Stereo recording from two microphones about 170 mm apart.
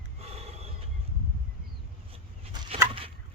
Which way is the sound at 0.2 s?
35° right (ahead or behind).